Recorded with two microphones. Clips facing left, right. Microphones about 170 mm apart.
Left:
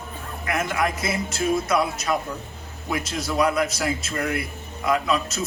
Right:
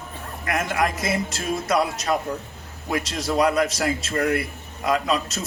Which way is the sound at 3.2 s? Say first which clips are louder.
Right 2 dB; 40° right (ahead or behind).